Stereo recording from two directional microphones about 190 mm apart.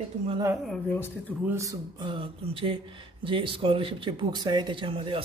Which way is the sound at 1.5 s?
15° right (ahead or behind).